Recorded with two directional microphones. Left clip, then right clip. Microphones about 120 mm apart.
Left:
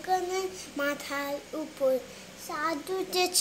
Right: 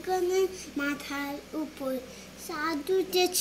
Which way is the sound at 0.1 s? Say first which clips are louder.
Right 2 dB; 35° left (ahead or behind).